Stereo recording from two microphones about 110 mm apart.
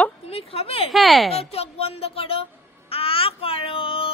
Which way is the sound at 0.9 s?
Centre (ahead or behind).